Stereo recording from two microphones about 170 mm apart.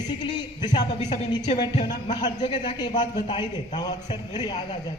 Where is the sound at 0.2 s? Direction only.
25° left (ahead or behind).